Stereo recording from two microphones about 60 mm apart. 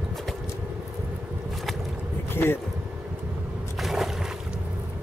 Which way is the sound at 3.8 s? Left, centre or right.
Centre.